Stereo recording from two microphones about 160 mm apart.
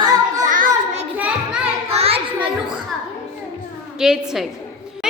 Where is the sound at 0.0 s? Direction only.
20° right (ahead or behind).